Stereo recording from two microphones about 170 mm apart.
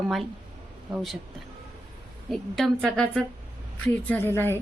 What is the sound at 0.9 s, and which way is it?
Speech, centre (ahead or behind).